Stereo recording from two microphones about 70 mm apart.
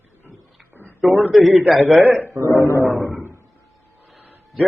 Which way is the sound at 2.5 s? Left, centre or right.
Left.